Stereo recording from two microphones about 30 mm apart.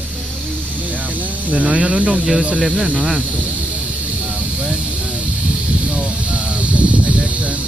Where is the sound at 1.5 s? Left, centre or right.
Right.